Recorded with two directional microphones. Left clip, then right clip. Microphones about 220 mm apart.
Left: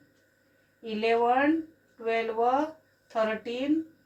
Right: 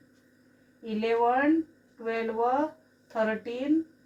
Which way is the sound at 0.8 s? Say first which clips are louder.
Left 1 dB; 10° right (ahead or behind).